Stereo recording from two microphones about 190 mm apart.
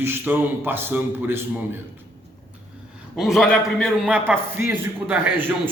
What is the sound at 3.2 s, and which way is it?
A man's voice, centre (ahead or behind).